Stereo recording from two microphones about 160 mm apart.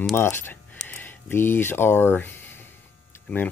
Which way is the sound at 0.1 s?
15° left (ahead or behind).